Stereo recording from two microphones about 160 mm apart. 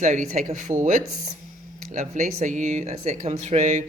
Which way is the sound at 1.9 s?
50° right (ahead or behind).